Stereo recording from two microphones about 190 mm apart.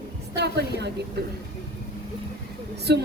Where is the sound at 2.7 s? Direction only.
60° right (ahead or behind).